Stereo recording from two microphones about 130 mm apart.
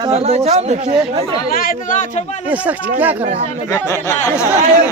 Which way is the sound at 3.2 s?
55° right (ahead or behind).